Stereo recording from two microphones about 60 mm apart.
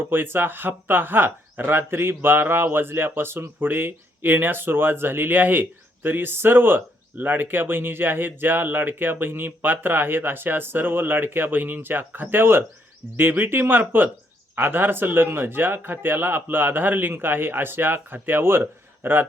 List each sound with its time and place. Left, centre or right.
0.0 s speech: right